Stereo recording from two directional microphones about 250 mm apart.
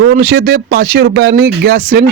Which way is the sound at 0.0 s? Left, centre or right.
Right.